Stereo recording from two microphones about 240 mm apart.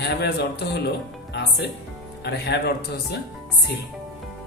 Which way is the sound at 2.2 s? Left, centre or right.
Left.